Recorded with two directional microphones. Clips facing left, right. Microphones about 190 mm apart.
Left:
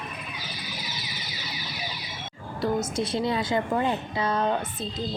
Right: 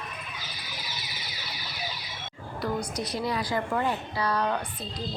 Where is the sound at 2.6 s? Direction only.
25° left (ahead or behind).